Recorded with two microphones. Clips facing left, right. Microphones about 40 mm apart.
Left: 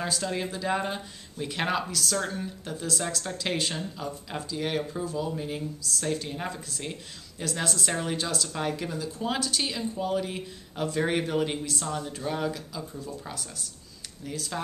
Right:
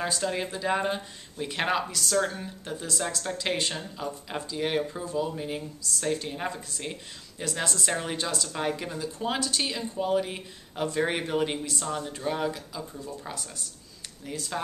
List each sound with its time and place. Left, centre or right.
0.0 s speech: centre